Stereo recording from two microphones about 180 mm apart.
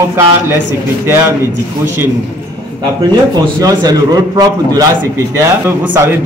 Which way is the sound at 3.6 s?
20° right (ahead or behind).